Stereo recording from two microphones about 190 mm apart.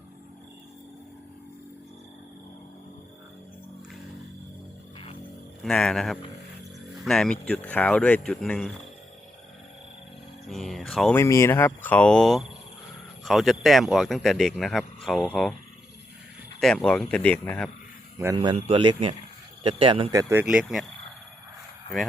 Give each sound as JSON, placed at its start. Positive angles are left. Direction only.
{"t": 5.6, "sound": "speech", "side_deg": 5}
{"t": 10.4, "sound": "mantra", "side_deg": 0}
{"t": 11.2, "sound": "speech", "side_deg": 15}
{"t": 16.6, "sound": "speech", "side_deg": 5}
{"t": 18.3, "sound": "speech", "side_deg": -25}
{"t": 20.4, "sound": "speech", "side_deg": -5}